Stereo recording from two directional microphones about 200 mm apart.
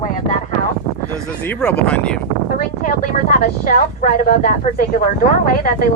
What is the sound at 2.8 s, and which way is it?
Speech, 45° left (ahead or behind).